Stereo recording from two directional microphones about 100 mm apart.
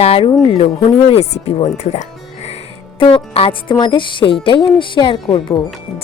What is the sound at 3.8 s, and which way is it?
Speech, 50° left (ahead or behind).